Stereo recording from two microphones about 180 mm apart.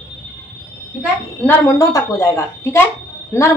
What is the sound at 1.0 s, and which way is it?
A child's voice, 15° left (ahead or behind).